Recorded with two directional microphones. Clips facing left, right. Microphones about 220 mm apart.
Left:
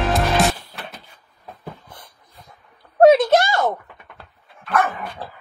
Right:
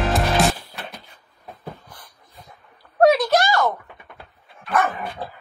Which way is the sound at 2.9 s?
25° left (ahead or behind).